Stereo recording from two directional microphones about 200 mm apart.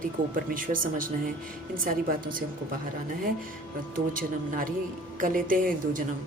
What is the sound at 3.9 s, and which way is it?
Speech, 45° right (ahead or behind).